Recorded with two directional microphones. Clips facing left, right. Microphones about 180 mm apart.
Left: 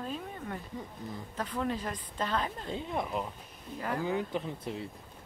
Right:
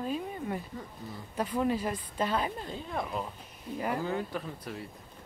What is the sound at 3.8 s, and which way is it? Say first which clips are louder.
Speech: right 2 dB; 10° right (ahead or behind).